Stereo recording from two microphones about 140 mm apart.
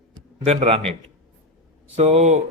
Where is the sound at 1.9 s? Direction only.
45° right (ahead or behind).